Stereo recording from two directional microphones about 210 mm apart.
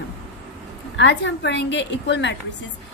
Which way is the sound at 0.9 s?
55° left (ahead or behind).